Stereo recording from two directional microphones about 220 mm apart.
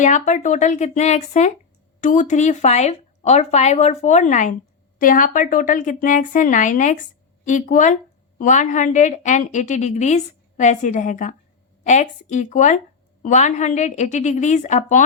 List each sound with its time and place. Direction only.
0.0 s a woman's voice: 35° left (ahead or behind)